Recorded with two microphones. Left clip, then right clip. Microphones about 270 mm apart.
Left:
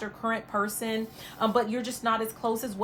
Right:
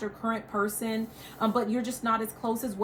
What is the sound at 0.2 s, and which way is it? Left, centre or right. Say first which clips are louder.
A woman's voice: left 2 dB; centre.